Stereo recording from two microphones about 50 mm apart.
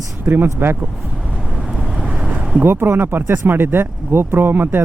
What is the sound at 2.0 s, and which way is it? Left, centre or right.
Boat, right.